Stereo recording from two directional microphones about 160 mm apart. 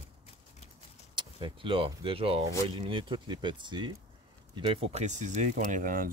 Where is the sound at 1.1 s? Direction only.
30° right (ahead or behind).